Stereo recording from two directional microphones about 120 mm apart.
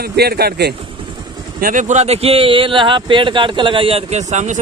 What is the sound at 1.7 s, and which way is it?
Speech, 80° right.